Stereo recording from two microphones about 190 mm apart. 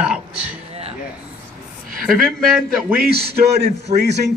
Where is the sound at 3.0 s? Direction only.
55° right (ahead or behind).